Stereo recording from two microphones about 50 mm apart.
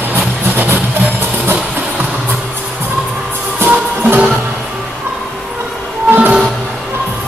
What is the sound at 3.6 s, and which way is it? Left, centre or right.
Music, right.